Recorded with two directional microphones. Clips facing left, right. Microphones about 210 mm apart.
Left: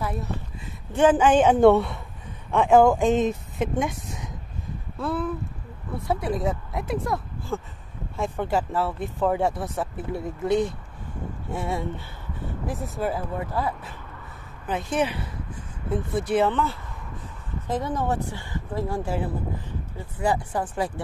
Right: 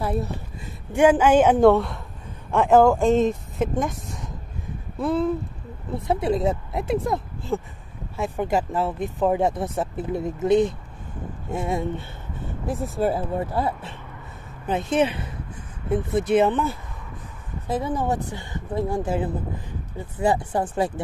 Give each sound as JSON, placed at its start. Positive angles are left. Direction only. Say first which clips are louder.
{"t": 0.0, "sound": "speech", "louder": "right 5 dB", "side_deg": -35}
{"t": 0.9, "sound": "speech", "louder": "right 2 dB", "side_deg": -10}
{"t": 4.9, "sound": "speech", "louder": "right 5 dB", "side_deg": -20}